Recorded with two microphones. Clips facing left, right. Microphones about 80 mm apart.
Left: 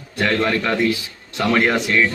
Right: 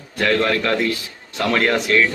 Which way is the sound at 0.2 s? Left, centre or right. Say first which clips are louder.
Right 1 dB; centre.